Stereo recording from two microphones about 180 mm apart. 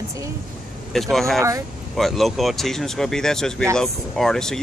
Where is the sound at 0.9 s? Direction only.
Centre (ahead or behind).